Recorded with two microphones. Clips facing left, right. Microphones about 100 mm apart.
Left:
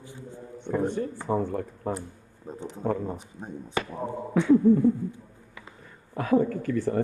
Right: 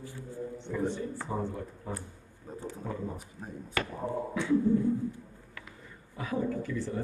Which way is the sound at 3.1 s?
25° left (ahead or behind).